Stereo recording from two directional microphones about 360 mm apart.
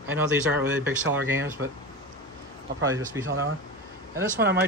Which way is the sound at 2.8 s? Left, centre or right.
Centre.